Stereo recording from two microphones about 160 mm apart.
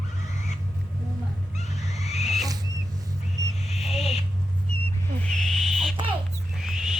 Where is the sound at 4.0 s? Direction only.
40° left (ahead or behind).